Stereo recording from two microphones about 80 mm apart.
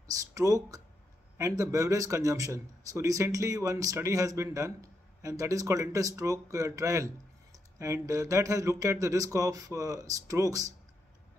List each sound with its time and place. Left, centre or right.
0.3 s speech: right